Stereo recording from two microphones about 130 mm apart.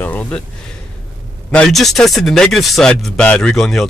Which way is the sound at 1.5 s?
5° left (ahead or behind).